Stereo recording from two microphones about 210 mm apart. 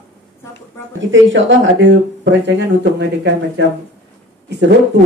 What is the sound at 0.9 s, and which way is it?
Speech, 65° right (ahead or behind).